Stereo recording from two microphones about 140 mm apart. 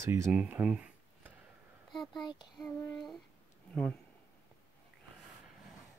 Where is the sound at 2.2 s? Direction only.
30° left (ahead or behind).